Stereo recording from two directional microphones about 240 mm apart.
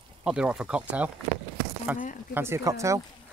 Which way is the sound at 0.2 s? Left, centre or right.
Centre.